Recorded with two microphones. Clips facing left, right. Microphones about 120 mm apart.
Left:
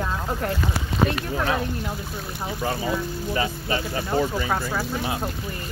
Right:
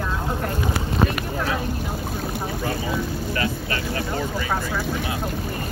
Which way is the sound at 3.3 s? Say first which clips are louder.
Left 4 dB; 15° left (ahead or behind).